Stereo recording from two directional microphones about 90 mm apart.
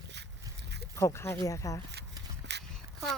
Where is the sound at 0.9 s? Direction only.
30° left (ahead or behind).